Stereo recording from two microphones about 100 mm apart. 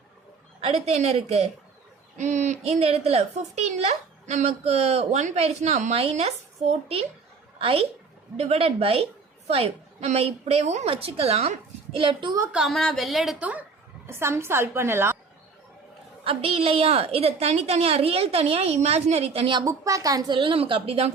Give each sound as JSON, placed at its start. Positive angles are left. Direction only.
{"t": 0.6, "sound": "a woman's voice", "side_deg": -90}
{"t": 2.6, "sound": "a woman's voice", "side_deg": -90}
{"t": 7.6, "sound": "a woman's voice", "side_deg": -75}
{"t": 8.4, "sound": "a woman's voice", "side_deg": -90}
{"t": 9.5, "sound": "a woman's voice", "side_deg": -90}
{"t": 12.5, "sound": "speech", "side_deg": -5}
{"t": 13.4, "sound": "a woman's voice", "side_deg": -15}
{"t": 14.1, "sound": "a woman's voice", "side_deg": -25}
{"t": 16.2, "sound": "a woman's voice", "side_deg": -70}
{"t": 19.6, "sound": "a woman's voice", "side_deg": -35}
{"t": 20.3, "sound": "a woman's voice", "side_deg": -60}